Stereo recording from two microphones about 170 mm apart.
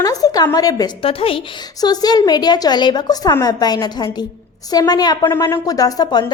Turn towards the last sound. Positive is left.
turn(degrees=25)  # may be behind; listen again after turning